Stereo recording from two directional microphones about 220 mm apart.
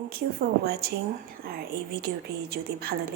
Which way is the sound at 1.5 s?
45° right (ahead or behind).